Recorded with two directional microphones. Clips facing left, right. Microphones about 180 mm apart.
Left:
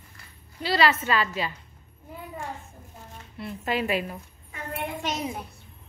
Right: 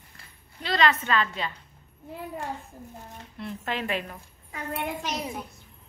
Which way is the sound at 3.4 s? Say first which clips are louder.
Left 4 dB; 5° left (ahead or behind).